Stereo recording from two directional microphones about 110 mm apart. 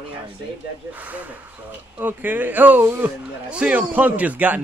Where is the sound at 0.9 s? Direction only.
15° right (ahead or behind).